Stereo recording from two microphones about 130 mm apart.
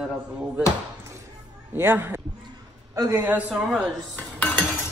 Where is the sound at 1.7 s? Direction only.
15° right (ahead or behind).